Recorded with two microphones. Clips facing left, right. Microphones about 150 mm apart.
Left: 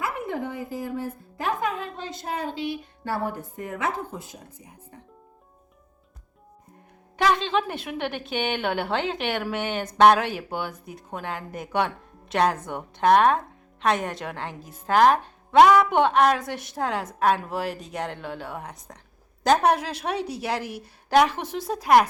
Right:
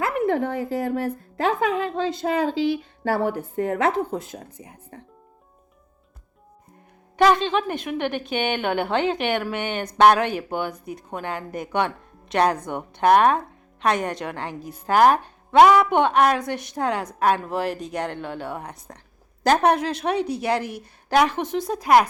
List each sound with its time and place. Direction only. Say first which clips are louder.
0.0 s speech: right 7 dB; 85° right
3.6 s speech: right 8 dB; 70° right (ahead or behind)
7.2 s speech: right 4 dB; centre (ahead or behind)